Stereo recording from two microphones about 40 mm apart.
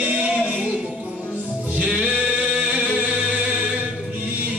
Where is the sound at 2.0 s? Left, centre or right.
Right.